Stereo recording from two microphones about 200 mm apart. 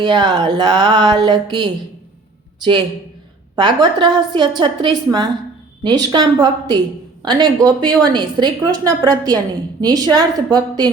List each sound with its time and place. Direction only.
0.0 s a woman's voice: 25° right (ahead or behind)
3.5 s a woman's voice: 20° right (ahead or behind)